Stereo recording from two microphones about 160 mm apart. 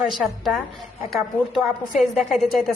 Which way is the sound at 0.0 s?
Centre (ahead or behind).